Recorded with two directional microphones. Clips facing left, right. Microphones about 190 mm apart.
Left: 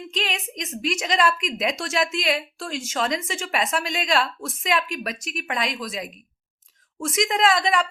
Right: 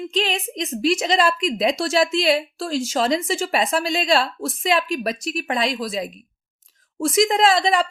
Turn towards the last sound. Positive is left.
turn(degrees=-30)  # may be behind; listen again after turning